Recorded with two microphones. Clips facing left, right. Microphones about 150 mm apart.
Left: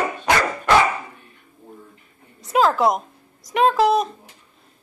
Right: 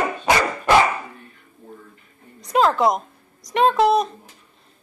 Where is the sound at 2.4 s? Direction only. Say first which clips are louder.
Even; centre (ahead or behind).